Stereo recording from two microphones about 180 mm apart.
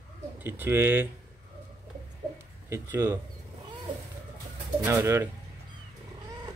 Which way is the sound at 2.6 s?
15° right (ahead or behind).